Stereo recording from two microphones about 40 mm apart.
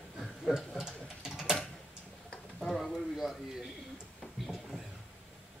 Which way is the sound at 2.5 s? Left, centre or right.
Centre.